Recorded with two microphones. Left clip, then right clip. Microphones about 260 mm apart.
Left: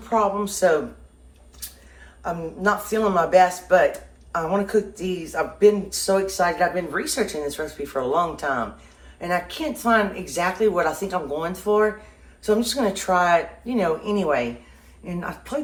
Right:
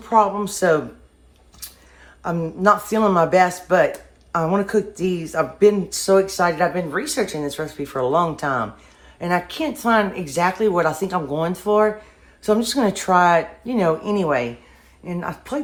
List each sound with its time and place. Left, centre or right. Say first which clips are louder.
0.0 s speech: right 4 dB; right
2.2 s speech: right 6 dB; right